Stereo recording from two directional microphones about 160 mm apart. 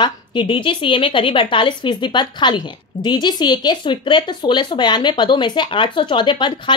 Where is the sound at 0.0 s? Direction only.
30° left (ahead or behind).